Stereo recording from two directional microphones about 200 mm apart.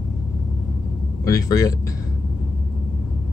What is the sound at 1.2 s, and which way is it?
Speech, 15° left (ahead or behind).